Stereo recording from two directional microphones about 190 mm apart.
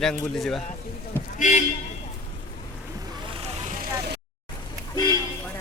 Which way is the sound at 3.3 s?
35° right (ahead or behind).